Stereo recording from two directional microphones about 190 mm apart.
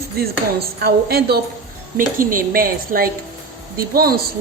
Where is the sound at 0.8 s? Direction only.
55° right (ahead or behind).